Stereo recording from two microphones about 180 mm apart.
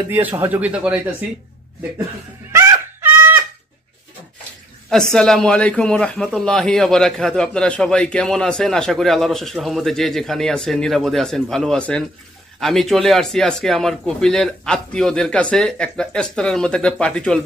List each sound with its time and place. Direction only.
0.1 s speech: 10° right (ahead or behind)
2.5 s a sound: 10° right (ahead or behind)
4.8 s a man's voice: 5° left (ahead or behind)